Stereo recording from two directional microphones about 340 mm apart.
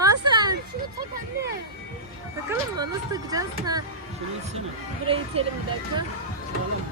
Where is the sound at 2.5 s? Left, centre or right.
Centre.